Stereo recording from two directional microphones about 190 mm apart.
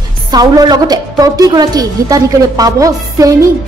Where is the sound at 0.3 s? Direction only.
20° right (ahead or behind).